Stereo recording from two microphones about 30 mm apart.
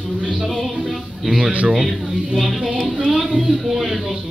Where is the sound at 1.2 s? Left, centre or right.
Centre.